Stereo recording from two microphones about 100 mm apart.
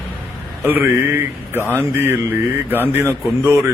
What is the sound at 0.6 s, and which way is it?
Speech, 20° right (ahead or behind).